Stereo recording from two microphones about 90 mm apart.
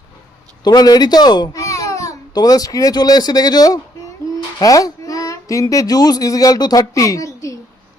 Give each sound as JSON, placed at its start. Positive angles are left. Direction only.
{"t": 0.6, "sound": "speech", "side_deg": 50}
{"t": 1.5, "sound": "speech", "side_deg": 35}